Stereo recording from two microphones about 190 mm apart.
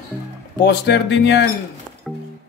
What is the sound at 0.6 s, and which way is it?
Speech, 60° left (ahead or behind).